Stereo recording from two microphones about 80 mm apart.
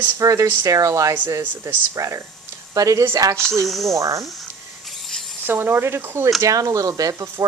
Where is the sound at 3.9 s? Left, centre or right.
Right.